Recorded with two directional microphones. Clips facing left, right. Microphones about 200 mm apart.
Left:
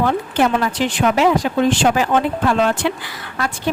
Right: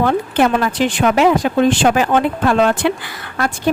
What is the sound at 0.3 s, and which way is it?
A woman's voice, 60° right (ahead or behind).